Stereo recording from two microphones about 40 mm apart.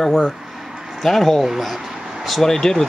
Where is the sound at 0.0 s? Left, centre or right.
Centre.